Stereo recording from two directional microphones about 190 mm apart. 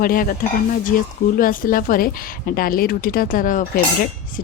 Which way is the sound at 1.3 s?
45° left (ahead or behind).